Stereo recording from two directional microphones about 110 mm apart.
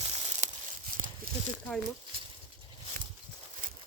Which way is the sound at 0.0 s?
75° right (ahead or behind).